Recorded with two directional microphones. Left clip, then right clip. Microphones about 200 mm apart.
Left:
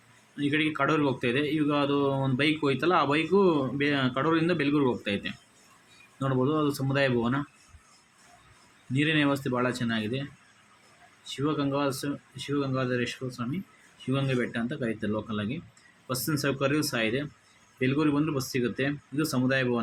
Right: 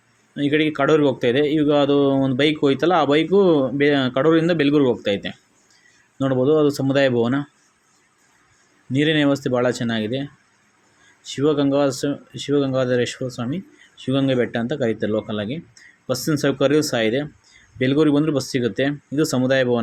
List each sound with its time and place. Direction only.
0.3 s speech: 15° right (ahead or behind)
8.9 s speech: 15° right (ahead or behind)